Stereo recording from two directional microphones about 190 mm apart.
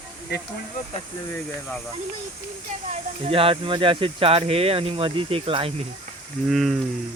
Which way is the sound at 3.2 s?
30° right (ahead or behind).